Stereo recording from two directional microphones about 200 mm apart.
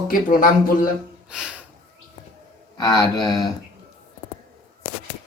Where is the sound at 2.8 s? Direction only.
20° left (ahead or behind).